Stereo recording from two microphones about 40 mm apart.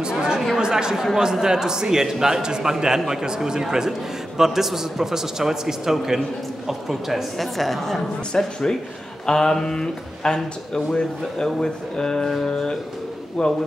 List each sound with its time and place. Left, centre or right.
0.6 s a man's voice: centre
8.4 s speech: centre